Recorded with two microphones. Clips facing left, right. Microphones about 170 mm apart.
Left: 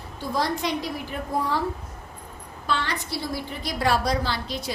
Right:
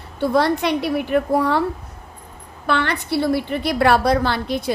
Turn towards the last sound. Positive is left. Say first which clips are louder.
# right 8 dB
turn(degrees=-55)  # may be behind; listen again after turning